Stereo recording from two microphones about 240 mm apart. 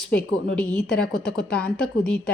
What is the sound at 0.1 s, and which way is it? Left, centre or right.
A woman's voice, centre.